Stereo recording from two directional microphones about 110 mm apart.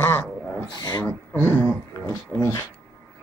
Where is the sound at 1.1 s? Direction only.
20° left (ahead or behind).